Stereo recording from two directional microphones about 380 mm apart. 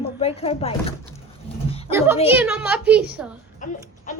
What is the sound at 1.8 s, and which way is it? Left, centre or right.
A woman's voice, centre.